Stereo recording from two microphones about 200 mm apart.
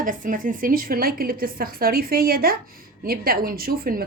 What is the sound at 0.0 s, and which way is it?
A woman's voice, 45° right (ahead or behind).